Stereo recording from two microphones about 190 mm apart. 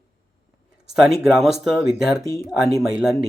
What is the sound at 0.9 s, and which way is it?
Speech, centre (ahead or behind).